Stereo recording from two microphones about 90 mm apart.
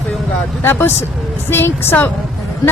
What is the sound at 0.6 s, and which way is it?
Speech, 25° left (ahead or behind).